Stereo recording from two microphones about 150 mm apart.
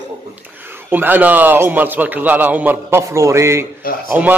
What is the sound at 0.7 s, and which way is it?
A man's voice, 15° right (ahead or behind).